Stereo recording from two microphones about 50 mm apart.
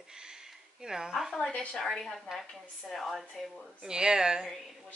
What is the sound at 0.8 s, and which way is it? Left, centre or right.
Speech, centre.